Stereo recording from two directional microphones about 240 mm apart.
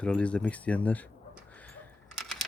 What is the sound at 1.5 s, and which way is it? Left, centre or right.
Camera, centre.